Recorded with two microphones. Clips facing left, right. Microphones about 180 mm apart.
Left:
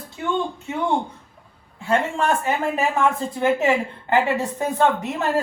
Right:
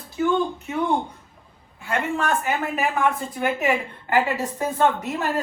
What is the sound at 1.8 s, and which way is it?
A woman's voice, 30° left (ahead or behind).